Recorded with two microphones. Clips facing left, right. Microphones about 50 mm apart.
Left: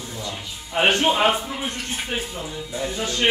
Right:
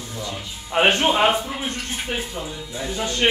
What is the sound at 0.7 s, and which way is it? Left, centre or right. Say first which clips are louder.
Speech: right 1 dB; right.